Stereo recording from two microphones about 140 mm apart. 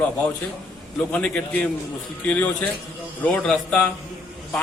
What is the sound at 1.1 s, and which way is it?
A man's voice, 5° left (ahead or behind).